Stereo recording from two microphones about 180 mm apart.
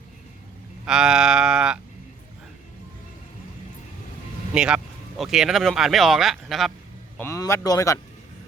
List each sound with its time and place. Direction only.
0.9 s speech: 5° right (ahead or behind)
4.5 s speech: 5° right (ahead or behind)
7.2 s speech: 15° left (ahead or behind)